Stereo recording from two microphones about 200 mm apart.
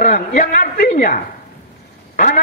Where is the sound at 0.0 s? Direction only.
40° left (ahead or behind).